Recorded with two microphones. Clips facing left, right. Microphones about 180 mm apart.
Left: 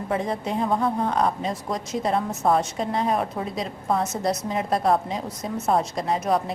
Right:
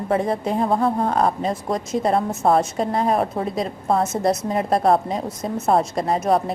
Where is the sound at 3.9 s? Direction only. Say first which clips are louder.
Right 4 dB; 25° right (ahead or behind).